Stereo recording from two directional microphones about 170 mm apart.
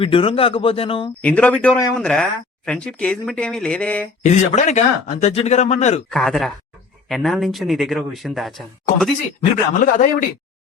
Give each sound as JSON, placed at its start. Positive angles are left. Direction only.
{"t": 0.0, "sound": "speech", "side_deg": 30}
{"t": 1.2, "sound": "speech", "side_deg": 10}
{"t": 4.2, "sound": "speech", "side_deg": 40}
{"t": 6.1, "sound": "speech", "side_deg": 0}
{"t": 9.4, "sound": "speech", "side_deg": 50}